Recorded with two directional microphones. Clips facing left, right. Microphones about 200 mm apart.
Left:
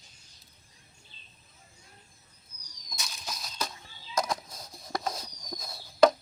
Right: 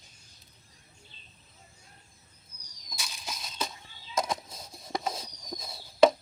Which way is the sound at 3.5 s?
Centre (ahead or behind).